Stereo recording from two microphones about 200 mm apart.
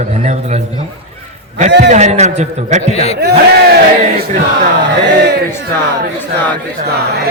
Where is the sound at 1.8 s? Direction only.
35° right (ahead or behind).